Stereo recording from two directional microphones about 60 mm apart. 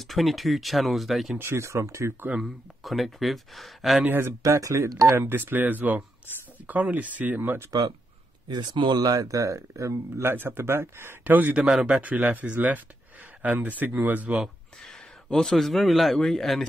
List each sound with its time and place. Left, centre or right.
0.0 s speech: centre
1.4 s speech: right
2.3 s speech: centre
4.5 s speech: right
5.1 s speech: right
9.0 s speech: right
10.3 s speech: right
11.2 s speech: right
11.7 s a man's voice: centre
12.0 s speech: right
14.4 s speech: centre